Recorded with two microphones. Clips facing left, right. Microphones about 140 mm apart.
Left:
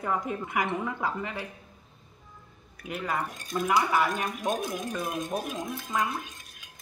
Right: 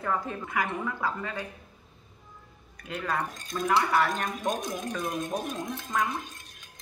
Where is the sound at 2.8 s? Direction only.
10° left (ahead or behind).